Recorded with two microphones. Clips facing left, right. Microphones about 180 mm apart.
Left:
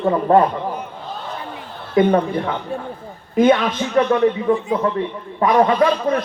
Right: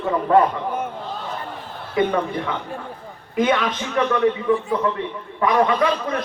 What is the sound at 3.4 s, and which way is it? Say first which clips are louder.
Speech: left 5 dB; 30° left (ahead or behind).